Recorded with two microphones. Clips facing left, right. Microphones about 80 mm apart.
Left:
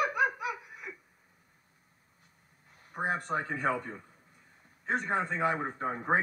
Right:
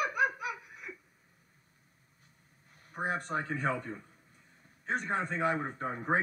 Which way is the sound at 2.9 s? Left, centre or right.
Centre.